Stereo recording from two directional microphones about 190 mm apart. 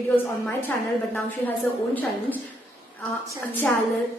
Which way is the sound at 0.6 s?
10° left (ahead or behind).